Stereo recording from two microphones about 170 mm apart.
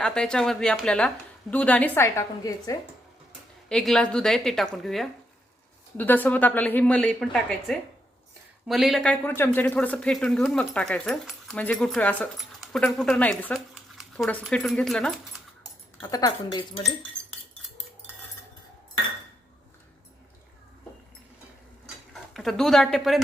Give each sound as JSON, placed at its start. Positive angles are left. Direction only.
{"t": 0.0, "sound": "speech", "side_deg": 5}
{"t": 3.7, "sound": "a woman's voice", "side_deg": 5}
{"t": 16.0, "sound": "speech", "side_deg": 20}
{"t": 22.1, "sound": "speech", "side_deg": 0}